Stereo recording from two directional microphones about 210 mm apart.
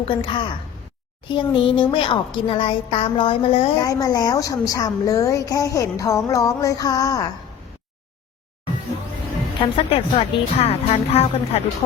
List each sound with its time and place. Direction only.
0.0 s a woman's voice: 25° left (ahead or behind)
9.7 s speech: 25° left (ahead or behind)